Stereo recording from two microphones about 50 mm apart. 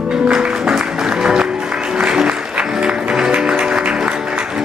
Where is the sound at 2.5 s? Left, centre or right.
Centre.